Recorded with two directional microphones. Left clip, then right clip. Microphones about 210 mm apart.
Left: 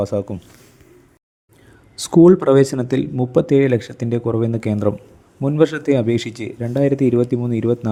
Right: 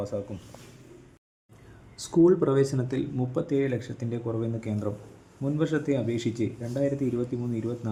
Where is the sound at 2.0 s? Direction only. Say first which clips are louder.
Left 10 dB; 40° left (ahead or behind).